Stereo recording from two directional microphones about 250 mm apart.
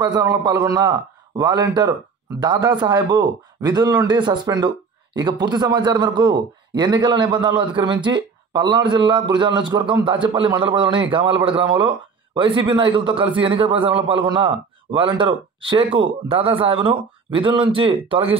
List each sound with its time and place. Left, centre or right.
0.0 s a man's voice: centre